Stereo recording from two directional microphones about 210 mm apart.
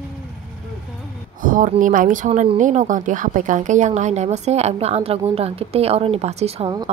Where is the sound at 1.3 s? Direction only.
40° right (ahead or behind).